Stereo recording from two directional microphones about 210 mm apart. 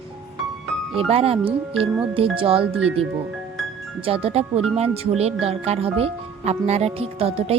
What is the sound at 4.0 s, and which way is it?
Speech, 25° right (ahead or behind).